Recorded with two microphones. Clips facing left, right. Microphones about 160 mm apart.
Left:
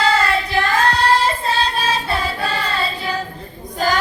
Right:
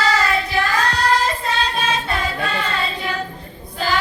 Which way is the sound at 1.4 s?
30° left (ahead or behind).